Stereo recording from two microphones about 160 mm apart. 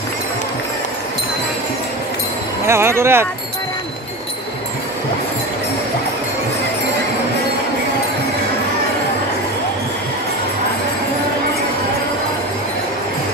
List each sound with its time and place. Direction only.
2.6 s speech: 15° right (ahead or behind)